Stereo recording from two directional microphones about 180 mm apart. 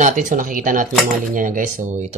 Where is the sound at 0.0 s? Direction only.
45° right (ahead or behind).